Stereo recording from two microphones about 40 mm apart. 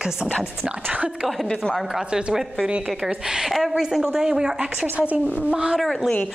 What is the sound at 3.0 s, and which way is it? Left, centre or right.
A woman's voice, centre.